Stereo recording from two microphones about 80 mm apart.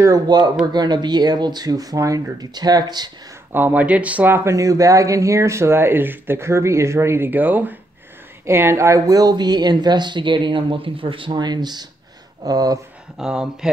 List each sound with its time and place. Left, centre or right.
0.3 s speech: right
3.5 s speech: right
4.5 s speech: right
8.5 s speech: right
12.4 s speech: right
13.2 s speech: centre